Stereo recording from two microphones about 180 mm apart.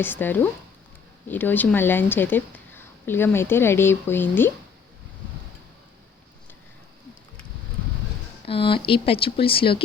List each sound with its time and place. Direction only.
0.0 s speech: 10° left (ahead or behind)
8.4 s speech: 30° left (ahead or behind)